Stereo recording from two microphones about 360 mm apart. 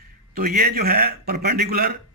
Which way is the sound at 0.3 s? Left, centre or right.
Right.